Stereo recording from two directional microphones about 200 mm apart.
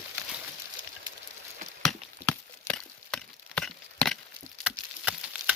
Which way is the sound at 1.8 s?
5° left (ahead or behind).